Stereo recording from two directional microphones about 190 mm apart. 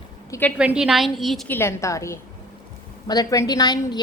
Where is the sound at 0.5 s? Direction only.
5° right (ahead or behind).